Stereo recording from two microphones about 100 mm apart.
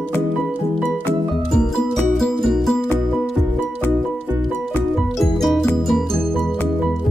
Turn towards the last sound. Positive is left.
turn(degrees=0)  # may be behind; listen again after turning